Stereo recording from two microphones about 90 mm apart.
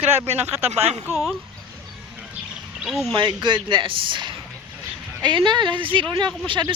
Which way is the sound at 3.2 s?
60° right (ahead or behind).